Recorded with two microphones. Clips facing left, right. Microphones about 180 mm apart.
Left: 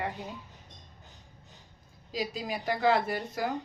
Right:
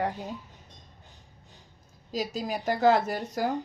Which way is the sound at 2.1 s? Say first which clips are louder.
Right 3 dB; 45° right (ahead or behind).